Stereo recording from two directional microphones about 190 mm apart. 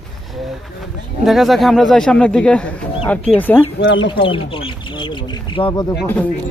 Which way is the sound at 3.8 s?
70° left (ahead or behind).